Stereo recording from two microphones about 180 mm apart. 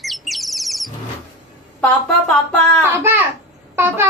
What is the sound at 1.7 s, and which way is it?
Speech, 5° left (ahead or behind).